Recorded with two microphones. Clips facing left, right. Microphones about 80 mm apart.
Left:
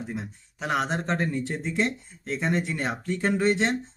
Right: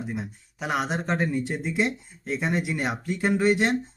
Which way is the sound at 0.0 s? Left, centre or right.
Centre.